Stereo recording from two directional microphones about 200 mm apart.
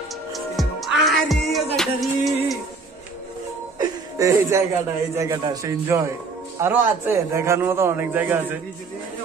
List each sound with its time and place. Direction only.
0.3 s music: centre (ahead or behind)
3.7 s chuckle: 15° right (ahead or behind)
5.1 s a man's voice: 15° right (ahead or behind)